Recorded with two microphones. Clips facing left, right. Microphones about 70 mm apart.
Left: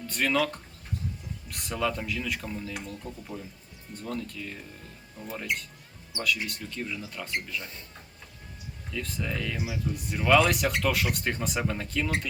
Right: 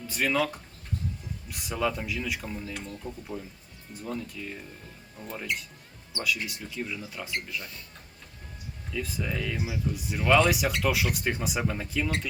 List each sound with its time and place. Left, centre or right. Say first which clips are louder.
0.1 s speech: even; centre
2.7 s speech: even; centre
3.9 s speech: even; centre
7.6 s speech: even; left
8.9 s speech: right 1 dB; centre